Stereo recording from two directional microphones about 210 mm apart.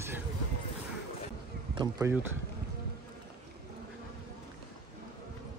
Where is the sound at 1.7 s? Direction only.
15° right (ahead or behind).